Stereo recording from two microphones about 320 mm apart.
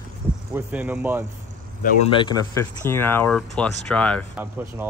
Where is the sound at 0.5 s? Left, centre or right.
Centre.